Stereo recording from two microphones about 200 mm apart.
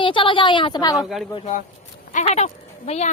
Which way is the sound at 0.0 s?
25° left (ahead or behind).